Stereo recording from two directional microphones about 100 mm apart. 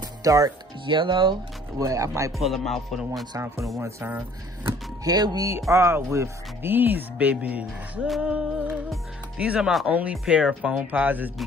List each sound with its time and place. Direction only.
0.2 s speech: 35° right (ahead or behind)
0.8 s speech: 55° right (ahead or behind)
1.8 s speech: 30° right (ahead or behind)
2.3 s speech: centre (ahead or behind)
3.3 s speech: 30° right (ahead or behind)
5.0 s speech: 40° right (ahead or behind)
5.5 s speech: 30° right (ahead or behind)